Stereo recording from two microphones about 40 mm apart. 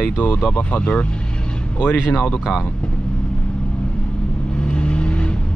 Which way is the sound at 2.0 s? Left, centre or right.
Left.